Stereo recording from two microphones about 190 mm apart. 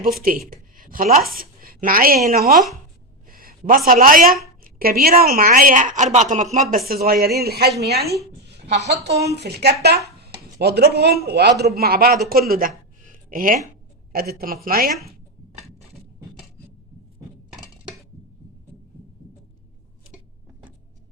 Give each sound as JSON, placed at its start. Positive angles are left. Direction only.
{"t": 0.0, "sound": "a woman's voice", "side_deg": -50}
{"t": 8.4, "sound": "a sound", "side_deg": -65}
{"t": 9.3, "sound": "a man's voice", "side_deg": -60}